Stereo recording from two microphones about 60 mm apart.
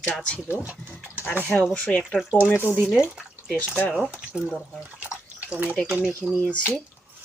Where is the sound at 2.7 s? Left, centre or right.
Centre.